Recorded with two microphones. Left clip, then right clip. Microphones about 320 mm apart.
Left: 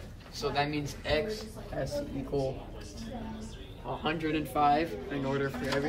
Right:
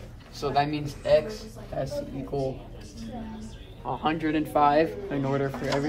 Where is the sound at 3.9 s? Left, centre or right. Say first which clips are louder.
Right 5 dB; centre.